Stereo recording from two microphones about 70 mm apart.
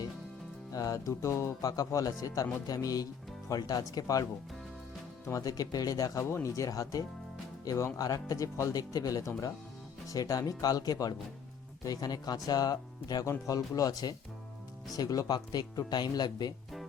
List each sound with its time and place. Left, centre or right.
0.7 s speech: left
4.0 s speech: left
5.3 s speech: left
6.1 s speech: left
13.2 s speech: left